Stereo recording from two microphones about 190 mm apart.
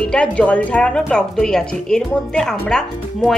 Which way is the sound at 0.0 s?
5° left (ahead or behind).